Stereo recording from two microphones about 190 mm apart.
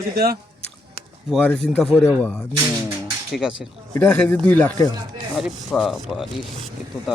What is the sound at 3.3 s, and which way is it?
Speech, centre (ahead or behind).